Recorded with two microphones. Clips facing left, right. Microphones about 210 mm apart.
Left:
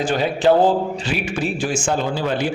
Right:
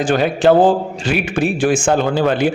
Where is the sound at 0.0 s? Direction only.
50° right (ahead or behind).